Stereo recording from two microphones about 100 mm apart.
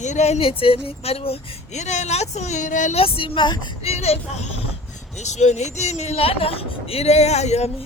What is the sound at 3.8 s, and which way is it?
Speech, 90° left.